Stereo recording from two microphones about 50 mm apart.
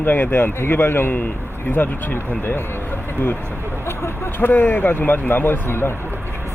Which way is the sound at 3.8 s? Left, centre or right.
Left.